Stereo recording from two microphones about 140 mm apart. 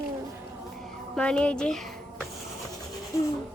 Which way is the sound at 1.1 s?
10° left (ahead or behind).